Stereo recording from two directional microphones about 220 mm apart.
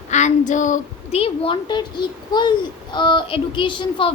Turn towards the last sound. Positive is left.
turn(degrees=25)  # may be behind; listen again after turning